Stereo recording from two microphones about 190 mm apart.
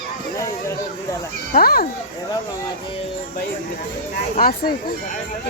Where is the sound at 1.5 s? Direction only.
50° left (ahead or behind).